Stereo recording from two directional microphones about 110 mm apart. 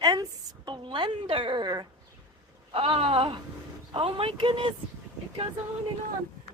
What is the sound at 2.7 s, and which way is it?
Speech, 60° right (ahead or behind).